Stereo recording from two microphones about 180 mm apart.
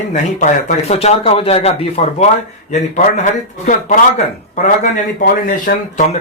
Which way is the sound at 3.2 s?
45° left (ahead or behind).